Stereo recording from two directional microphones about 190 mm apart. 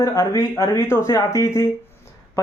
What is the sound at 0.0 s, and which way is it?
Speech, 20° left (ahead or behind).